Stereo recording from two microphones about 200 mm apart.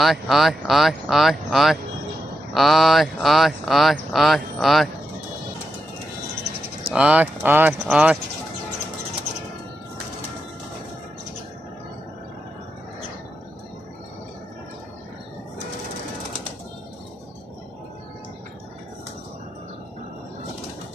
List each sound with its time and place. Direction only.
0.0 s speech: centre (ahead or behind)
6.9 s speech: 5° right (ahead or behind)